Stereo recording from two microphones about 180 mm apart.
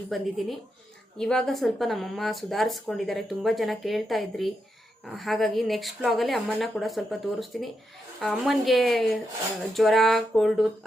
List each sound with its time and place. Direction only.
0.1 s speech: centre (ahead or behind)